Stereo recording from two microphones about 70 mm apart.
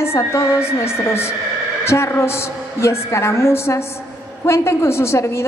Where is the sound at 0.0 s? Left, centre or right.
Left.